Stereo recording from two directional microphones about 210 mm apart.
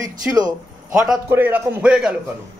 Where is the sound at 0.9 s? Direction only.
5° right (ahead or behind).